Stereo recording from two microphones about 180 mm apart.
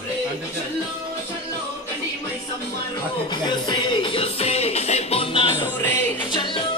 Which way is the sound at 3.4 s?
25° left (ahead or behind).